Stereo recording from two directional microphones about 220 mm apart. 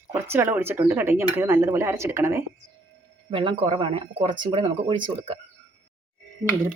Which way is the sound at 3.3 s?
20° right (ahead or behind).